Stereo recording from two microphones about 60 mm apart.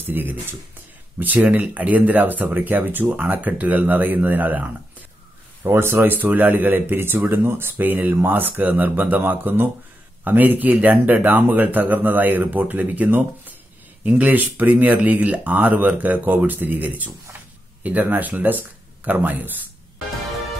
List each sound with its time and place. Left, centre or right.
0.0 s speech: right
5.6 s speech: right
6.0 s speech: right